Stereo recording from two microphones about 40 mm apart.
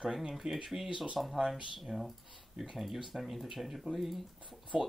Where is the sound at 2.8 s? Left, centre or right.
Centre.